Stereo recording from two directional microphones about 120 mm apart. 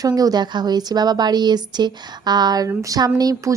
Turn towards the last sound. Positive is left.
turn(degrees=-30)  # may be behind; listen again after turning